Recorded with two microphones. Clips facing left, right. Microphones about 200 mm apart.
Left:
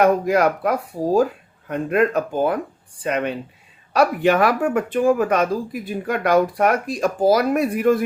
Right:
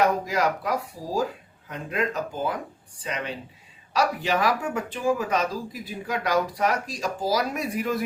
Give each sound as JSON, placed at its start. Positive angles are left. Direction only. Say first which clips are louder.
{"t": 0.0, "sound": "speech", "louder": "left 7 dB", "side_deg": 55}